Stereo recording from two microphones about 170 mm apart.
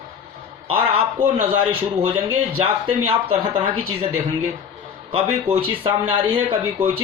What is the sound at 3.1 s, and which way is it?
Speech, 35° right (ahead or behind).